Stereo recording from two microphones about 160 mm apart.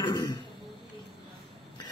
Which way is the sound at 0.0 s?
25° left (ahead or behind).